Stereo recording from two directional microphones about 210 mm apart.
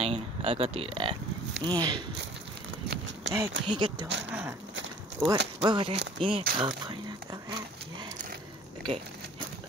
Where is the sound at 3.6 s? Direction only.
20° right (ahead or behind).